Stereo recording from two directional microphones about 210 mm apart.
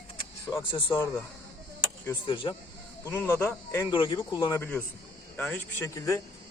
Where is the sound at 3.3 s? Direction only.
10° left (ahead or behind).